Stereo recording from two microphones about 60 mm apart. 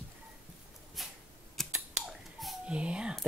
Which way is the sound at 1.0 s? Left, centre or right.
Centre.